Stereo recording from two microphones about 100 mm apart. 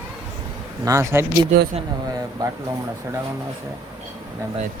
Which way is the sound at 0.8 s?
30° right (ahead or behind).